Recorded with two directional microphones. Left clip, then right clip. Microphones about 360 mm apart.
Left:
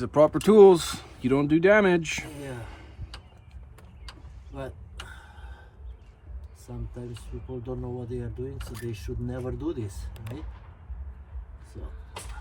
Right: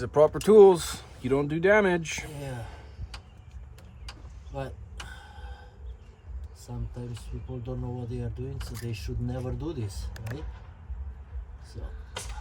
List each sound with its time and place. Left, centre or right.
0.0 s speech: left
2.4 s speech: centre
5.1 s a sound: centre
7.2 s speech: centre